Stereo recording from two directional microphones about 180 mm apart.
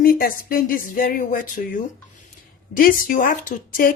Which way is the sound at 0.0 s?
55° left (ahead or behind).